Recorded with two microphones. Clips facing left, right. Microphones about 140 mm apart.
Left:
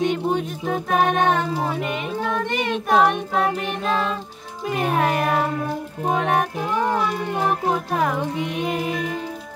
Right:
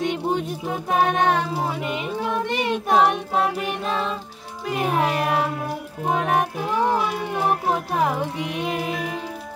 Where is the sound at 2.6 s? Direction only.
20° right (ahead or behind).